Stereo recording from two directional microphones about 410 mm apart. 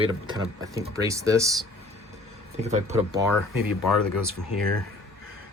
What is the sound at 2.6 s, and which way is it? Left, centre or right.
Speech, centre.